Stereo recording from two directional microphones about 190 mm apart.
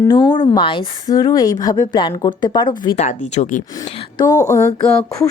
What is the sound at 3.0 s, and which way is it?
Speech, 40° left (ahead or behind).